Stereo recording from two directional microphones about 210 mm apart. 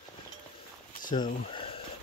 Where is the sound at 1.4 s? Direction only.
25° left (ahead or behind).